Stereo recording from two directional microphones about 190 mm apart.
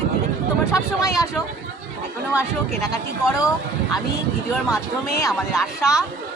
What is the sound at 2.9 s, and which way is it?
Speech, 20° left (ahead or behind).